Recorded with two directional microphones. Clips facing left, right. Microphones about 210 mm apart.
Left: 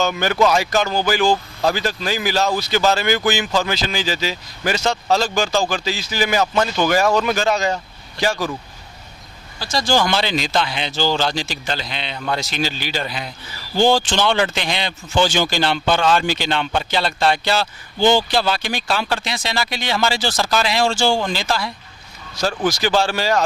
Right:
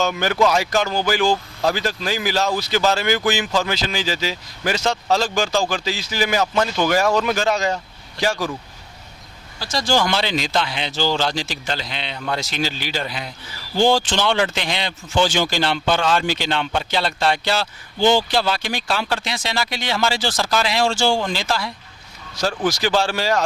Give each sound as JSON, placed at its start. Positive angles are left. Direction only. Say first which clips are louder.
{"t": 0.0, "sound": "speech", "louder": "left 1 dB", "side_deg": 15}
{"t": 9.6, "sound": "speech", "louder": "left 1 dB", "side_deg": 10}
{"t": 18.0, "sound": "speech", "louder": "left 1 dB", "side_deg": 45}
{"t": 18.3, "sound": "speech", "louder": "left 1 dB", "side_deg": 10}